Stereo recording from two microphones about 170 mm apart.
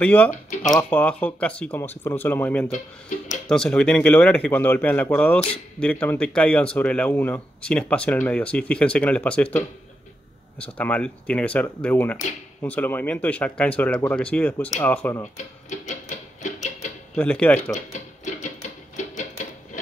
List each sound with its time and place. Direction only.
0.0 s speech: 10° left (ahead or behind)
15.3 s speech: 45° left (ahead or behind)
17.1 s speech: 10° left (ahead or behind)
17.7 s music: 45° left (ahead or behind)